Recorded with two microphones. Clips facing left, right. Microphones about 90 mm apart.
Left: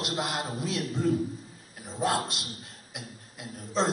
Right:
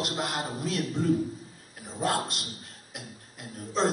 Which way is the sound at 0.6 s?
45° right (ahead or behind).